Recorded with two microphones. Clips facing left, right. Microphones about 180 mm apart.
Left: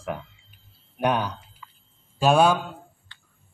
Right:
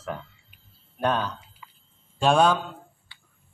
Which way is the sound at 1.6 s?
15° right (ahead or behind).